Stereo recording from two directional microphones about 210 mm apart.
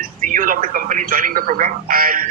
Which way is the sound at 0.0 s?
40° right (ahead or behind).